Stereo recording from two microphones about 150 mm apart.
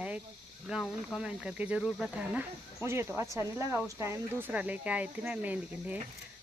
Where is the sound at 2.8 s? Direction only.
15° right (ahead or behind).